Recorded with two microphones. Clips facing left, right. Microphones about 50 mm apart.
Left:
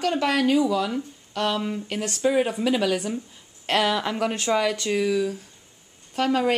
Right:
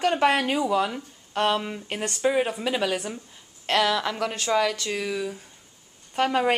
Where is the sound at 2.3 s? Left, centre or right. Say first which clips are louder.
Left 3 dB; centre.